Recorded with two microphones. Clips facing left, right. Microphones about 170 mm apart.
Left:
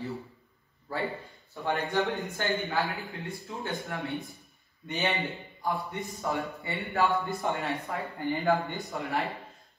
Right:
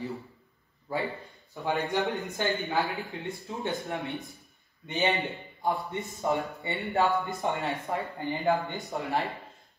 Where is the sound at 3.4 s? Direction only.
20° right (ahead or behind).